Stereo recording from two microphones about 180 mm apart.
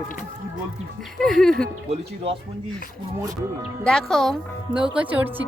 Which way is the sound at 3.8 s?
5° left (ahead or behind).